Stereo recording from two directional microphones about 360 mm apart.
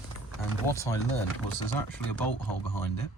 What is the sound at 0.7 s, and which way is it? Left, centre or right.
Speech, centre.